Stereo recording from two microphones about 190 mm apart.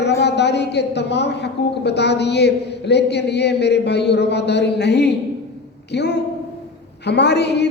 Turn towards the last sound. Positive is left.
turn(degrees=60)  # may be behind; listen again after turning